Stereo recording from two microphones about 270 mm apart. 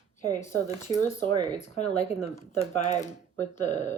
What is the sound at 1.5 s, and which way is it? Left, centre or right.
Speech, left.